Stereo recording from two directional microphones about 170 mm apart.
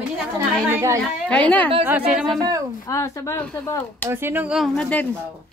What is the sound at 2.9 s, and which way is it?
Speech, 15° left (ahead or behind).